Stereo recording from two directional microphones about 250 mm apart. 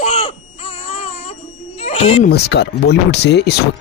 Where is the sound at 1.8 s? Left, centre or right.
Left.